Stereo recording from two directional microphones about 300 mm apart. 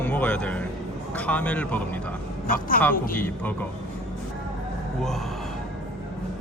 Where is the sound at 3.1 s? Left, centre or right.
Centre.